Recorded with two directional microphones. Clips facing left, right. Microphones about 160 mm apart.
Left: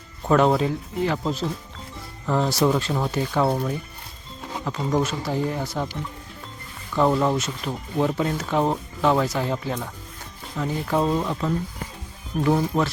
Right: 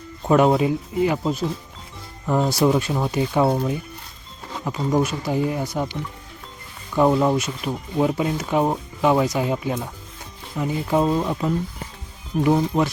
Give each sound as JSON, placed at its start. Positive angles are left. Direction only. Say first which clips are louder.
{"t": 0.3, "sound": "speech", "louder": "right 2 dB", "side_deg": -10}
{"t": 4.9, "sound": "speech", "louder": "right 3 dB", "side_deg": -10}
{"t": 6.9, "sound": "speech", "louder": "right 3 dB", "side_deg": -10}